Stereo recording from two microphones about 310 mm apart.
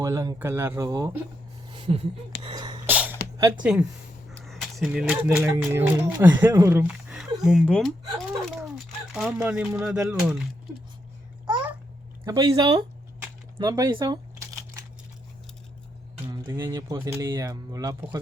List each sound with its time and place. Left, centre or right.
0.0 s speech: centre
1.7 s a sound: centre
2.4 s sneeze: centre
3.6 s speech: centre
9.1 s speech: centre
12.2 s speech: centre
13.2 s crumpling: centre
16.2 s speech: centre